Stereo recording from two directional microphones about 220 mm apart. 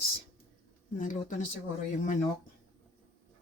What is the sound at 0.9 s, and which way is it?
Speech, 35° left (ahead or behind).